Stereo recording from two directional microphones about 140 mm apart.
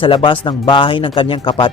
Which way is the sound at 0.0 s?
35° left (ahead or behind).